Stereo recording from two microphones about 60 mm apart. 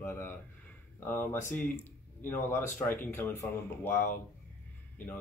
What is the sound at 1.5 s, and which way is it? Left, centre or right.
Speech, left.